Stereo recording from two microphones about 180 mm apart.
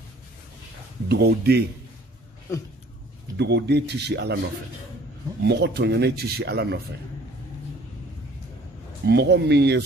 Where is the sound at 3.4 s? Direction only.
70° right (ahead or behind).